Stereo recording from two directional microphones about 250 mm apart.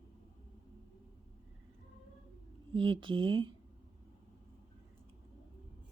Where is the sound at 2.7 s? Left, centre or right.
Centre.